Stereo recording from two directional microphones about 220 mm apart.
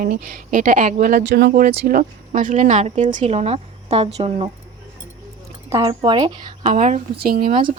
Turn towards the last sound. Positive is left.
turn(degrees=-20)  # may be behind; listen again after turning